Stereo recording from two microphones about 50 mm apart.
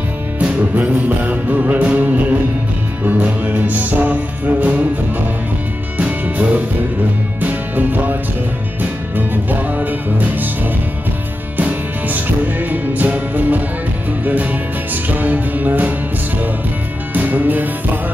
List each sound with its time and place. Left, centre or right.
0.7 s music: right
5.9 s music: right
11.5 s music: right
17.1 s music: right